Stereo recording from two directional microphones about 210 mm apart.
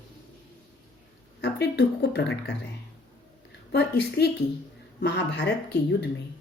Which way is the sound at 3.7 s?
50° left (ahead or behind).